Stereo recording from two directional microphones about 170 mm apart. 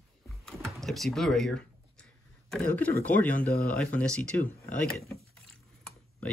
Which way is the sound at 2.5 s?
10° left (ahead or behind).